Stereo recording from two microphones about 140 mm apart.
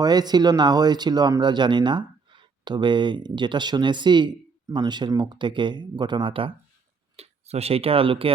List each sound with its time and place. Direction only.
0.0 s speech: 30° right (ahead or behind)
7.2 s speech: 50° right (ahead or behind)